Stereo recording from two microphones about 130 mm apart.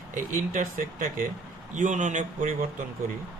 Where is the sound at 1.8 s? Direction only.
75° right (ahead or behind).